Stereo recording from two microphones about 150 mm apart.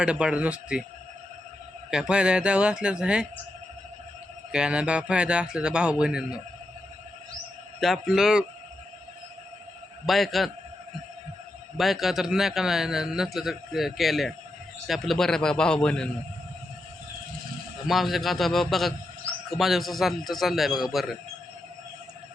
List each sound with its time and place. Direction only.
0.0 s speech: 5° right (ahead or behind)
1.9 s speech: 5° right (ahead or behind)
4.5 s speech: 5° right (ahead or behind)
7.8 s a man's voice: centre (ahead or behind)
10.1 s a man's voice: centre (ahead or behind)
11.8 s a man's voice: centre (ahead or behind)
17.8 s a man's voice: centre (ahead or behind)